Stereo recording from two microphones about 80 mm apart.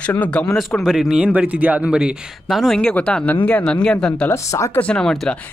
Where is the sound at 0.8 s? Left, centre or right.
Centre.